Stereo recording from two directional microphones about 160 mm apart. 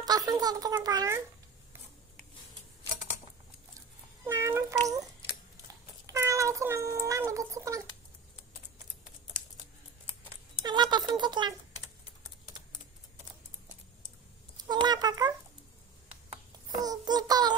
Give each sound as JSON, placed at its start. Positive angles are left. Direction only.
{"t": 0.0, "sound": "a child's voice", "side_deg": -25}
{"t": 4.3, "sound": "a sound", "side_deg": -15}
{"t": 6.0, "sound": "a sound", "side_deg": -20}
{"t": 10.6, "sound": "speech", "side_deg": -30}
{"t": 14.7, "sound": "child singing", "side_deg": -25}
{"t": 16.7, "sound": "child singing", "side_deg": -25}